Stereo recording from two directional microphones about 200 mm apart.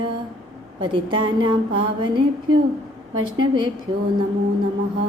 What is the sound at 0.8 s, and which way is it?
Speech, 25° right (ahead or behind).